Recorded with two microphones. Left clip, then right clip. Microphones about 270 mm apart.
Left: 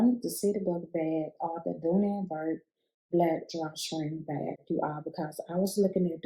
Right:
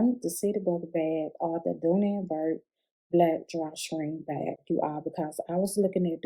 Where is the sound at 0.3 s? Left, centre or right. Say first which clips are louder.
Right 2 dB; right.